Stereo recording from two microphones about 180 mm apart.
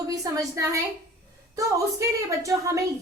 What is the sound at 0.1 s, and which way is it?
A woman's voice, 20° right (ahead or behind).